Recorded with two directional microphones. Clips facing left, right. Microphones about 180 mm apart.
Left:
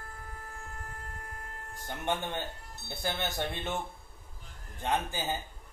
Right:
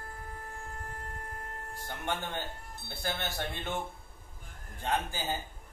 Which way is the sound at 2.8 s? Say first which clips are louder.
Left 2 dB; 20° left (ahead or behind).